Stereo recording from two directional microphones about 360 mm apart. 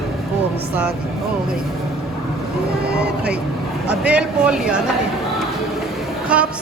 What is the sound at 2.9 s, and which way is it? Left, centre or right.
Speech, right.